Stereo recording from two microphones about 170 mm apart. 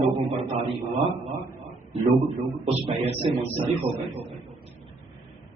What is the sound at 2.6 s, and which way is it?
Speech, 35° right (ahead or behind).